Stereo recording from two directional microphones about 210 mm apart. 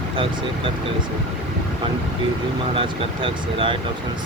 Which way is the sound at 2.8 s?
25° right (ahead or behind).